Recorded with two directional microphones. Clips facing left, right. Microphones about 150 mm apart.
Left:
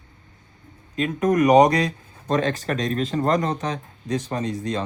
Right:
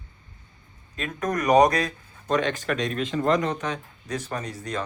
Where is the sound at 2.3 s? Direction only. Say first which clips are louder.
Left 2 dB; 35° left (ahead or behind).